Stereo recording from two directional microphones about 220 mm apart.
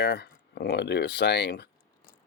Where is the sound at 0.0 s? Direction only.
45° left (ahead or behind).